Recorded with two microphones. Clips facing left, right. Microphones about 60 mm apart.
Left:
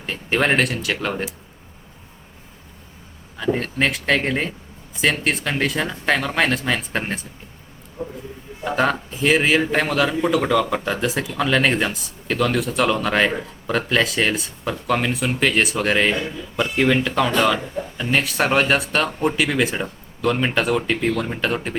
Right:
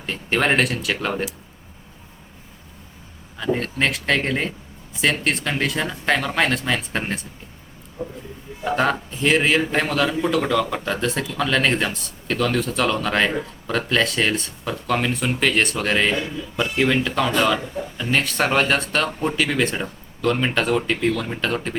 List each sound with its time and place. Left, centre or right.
0.0 s a man's voice: centre
3.3 s a man's voice: centre
8.0 s a sound: left
8.6 s a man's voice: centre